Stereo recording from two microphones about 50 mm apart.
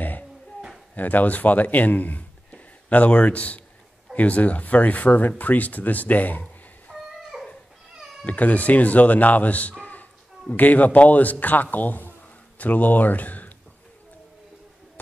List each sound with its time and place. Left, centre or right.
0.9 s a man's voice: left
6.9 s a sound: centre
8.3 s a man's voice: left